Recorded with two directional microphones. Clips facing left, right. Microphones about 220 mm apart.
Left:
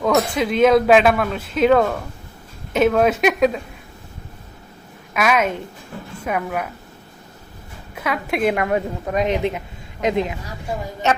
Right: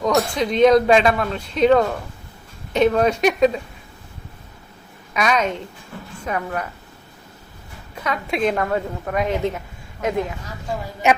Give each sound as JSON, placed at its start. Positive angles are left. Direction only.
{"t": 0.3, "sound": "speech", "side_deg": 5}
{"t": 5.1, "sound": "a woman's voice", "side_deg": 5}
{"t": 8.0, "sound": "a woman's voice", "side_deg": 5}